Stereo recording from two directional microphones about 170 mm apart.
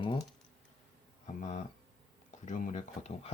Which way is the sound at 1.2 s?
40° left (ahead or behind).